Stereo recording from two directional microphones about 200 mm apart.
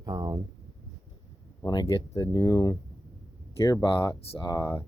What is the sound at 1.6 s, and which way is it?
Speech, 20° left (ahead or behind).